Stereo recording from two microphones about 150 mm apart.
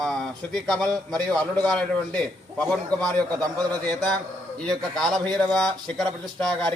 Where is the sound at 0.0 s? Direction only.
5° left (ahead or behind).